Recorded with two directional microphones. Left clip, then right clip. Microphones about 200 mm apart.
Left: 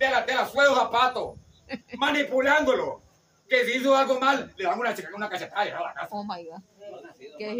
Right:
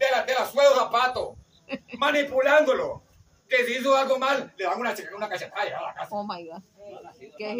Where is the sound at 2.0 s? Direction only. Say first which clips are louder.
Right 2 dB; 20° left (ahead or behind).